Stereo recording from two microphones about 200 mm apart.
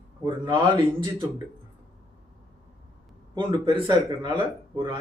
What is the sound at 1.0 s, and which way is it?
Speech, 25° right (ahead or behind).